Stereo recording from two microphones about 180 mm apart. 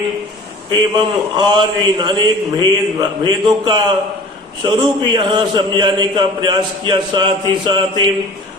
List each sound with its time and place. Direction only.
0.7 s a man's voice: 25° right (ahead or behind)